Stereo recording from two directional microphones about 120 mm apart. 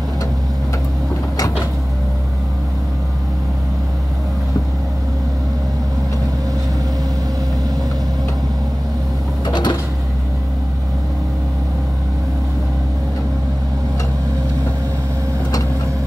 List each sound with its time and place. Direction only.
9.5 s printer: 35° left (ahead or behind)